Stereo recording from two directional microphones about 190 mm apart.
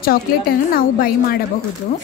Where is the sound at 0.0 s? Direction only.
50° left (ahead or behind).